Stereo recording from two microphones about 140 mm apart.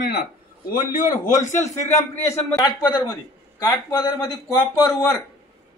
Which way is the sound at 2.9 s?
30° left (ahead or behind).